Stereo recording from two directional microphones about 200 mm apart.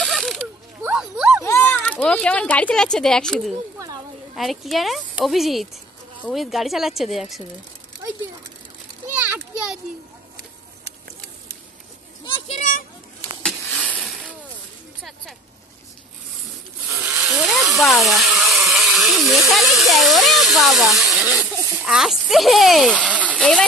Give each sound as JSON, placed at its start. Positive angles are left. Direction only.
{"t": 0.0, "sound": "ratchet", "side_deg": 0}
{"t": 1.4, "sound": "a child's voice", "side_deg": 15}
{"t": 12.4, "sound": "children playing", "side_deg": 35}
{"t": 13.4, "sound": "a sound", "side_deg": 5}
{"t": 17.0, "sound": "vehicle", "side_deg": -5}
{"t": 17.7, "sound": "speech", "side_deg": 0}
{"t": 23.3, "sound": "speech", "side_deg": 5}